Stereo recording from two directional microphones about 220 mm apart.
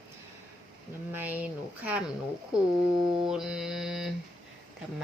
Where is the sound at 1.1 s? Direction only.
10° right (ahead or behind).